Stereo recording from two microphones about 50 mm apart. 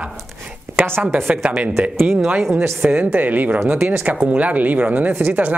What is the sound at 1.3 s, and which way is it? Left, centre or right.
Speech, right.